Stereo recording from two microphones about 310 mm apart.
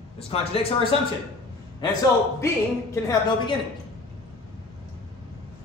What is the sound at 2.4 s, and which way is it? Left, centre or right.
Speech, centre.